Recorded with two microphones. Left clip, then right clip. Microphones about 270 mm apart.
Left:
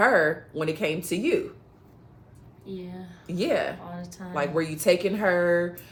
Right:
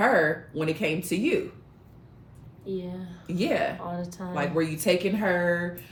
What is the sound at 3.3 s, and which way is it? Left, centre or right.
Speech, centre.